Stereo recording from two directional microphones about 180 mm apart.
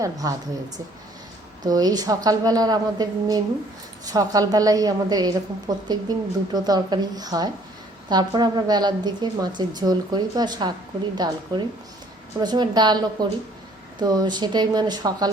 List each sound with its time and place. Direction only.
0.0 s a woman's voice: 20° right (ahead or behind)
1.6 s a woman's voice: 20° right (ahead or behind)